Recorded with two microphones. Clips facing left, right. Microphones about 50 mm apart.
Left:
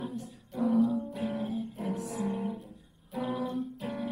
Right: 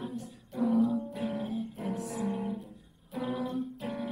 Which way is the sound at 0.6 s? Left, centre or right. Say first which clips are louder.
Left 1 dB; left.